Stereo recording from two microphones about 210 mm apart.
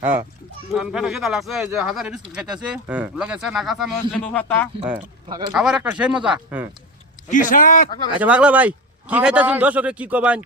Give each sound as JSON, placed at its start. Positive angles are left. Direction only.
{"t": 0.0, "sound": "a man's voice", "side_deg": -10}
{"t": 5.5, "sound": "speech", "side_deg": -5}
{"t": 7.3, "sound": "a man's voice", "side_deg": 40}
{"t": 8.2, "sound": "a man's voice", "side_deg": -5}